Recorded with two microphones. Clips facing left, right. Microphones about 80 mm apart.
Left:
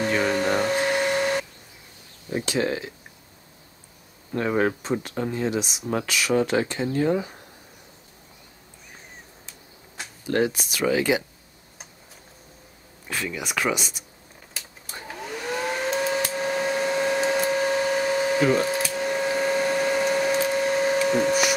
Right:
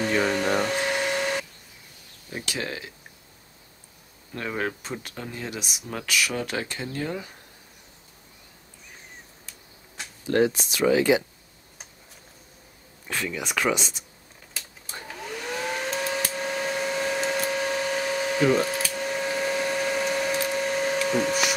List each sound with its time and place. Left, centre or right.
0.0 s a sound: centre
2.3 s speech: left
4.3 s speech: left
9.9 s a sound: centre
13.1 s speech: centre
15.0 s hair dryer: centre